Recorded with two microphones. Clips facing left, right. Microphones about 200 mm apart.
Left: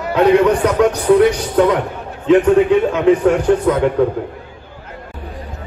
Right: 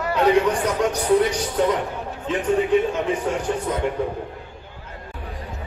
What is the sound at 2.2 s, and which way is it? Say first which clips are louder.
A man's voice: left 11 dB; 90° left.